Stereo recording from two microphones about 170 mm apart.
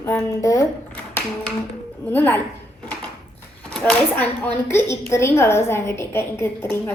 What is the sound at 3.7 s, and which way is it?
A woman's voice, 5° left (ahead or behind).